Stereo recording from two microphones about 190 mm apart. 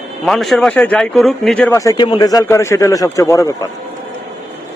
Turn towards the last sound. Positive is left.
turn(degrees=15)  # may be behind; listen again after turning